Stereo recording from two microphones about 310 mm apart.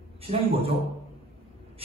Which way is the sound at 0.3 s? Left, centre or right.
Centre.